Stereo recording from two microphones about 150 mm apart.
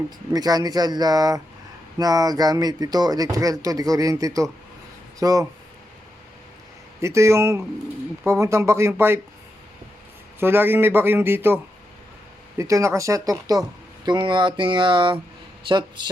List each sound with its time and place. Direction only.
0.3 s speech: 25° right (ahead or behind)
7.0 s a man's voice: 20° right (ahead or behind)
10.4 s a man's voice: 15° right (ahead or behind); by 16.0 s 30° right (ahead or behind)